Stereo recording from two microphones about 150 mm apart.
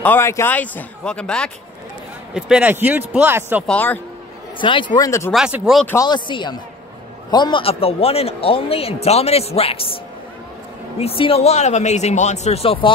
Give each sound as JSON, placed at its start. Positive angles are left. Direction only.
{"t": 0.0, "sound": "a man's voice", "side_deg": 15}
{"t": 2.3, "sound": "speech", "side_deg": -5}
{"t": 3.6, "sound": "a man's voice", "side_deg": 10}
{"t": 4.6, "sound": "speech", "side_deg": 35}
{"t": 5.3, "sound": "speech", "side_deg": -5}
{"t": 6.0, "sound": "a man's voice", "side_deg": 30}
{"t": 11.0, "sound": "speech", "side_deg": 40}